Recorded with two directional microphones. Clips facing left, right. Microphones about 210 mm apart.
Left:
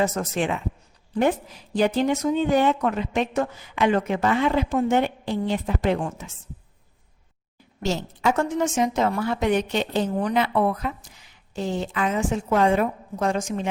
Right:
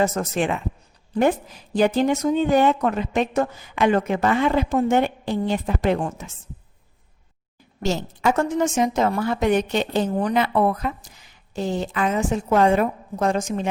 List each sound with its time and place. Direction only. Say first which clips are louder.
0.0 s speech: right 2 dB; 45° right (ahead or behind)
1.7 s speech: right 2 dB; 45° right (ahead or behind)
7.8 s a woman's voice: right 2 dB; 45° right (ahead or behind)